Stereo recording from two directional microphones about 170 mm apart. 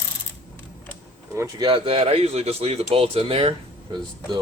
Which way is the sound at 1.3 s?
15° right (ahead or behind).